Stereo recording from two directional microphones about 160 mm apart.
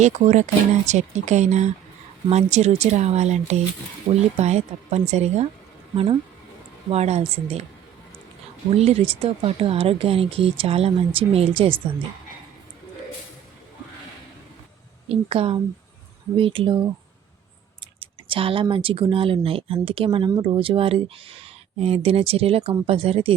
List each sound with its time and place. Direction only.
0.0 s speech: 50° right (ahead or behind)
6.9 s speech: 40° right (ahead or behind)
8.7 s speech: 40° right (ahead or behind)
15.1 s speech: 40° right (ahead or behind)
18.0 s speech: 35° right (ahead or behind)